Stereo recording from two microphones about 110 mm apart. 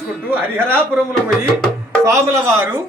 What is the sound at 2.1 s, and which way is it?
Speech, 25° right (ahead or behind).